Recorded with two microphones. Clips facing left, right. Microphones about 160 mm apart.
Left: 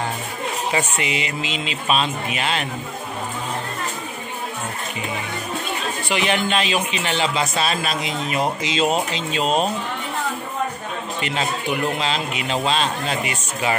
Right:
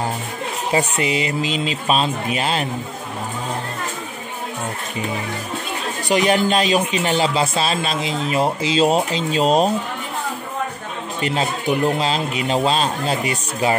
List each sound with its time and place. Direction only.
0.7 s speech: 35° right (ahead or behind)
6.0 s speech: 40° right (ahead or behind)
11.1 s speech: 35° right (ahead or behind)